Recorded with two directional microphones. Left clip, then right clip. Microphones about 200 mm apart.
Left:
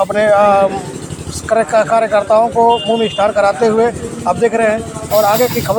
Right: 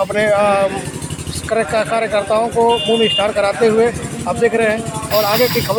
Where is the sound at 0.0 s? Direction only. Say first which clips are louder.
Left 4 dB; centre (ahead or behind).